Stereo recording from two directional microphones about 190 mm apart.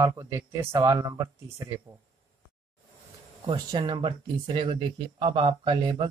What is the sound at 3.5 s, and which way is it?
Speech, 25° right (ahead or behind).